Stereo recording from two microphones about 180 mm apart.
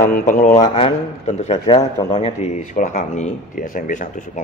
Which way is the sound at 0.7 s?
35° left (ahead or behind).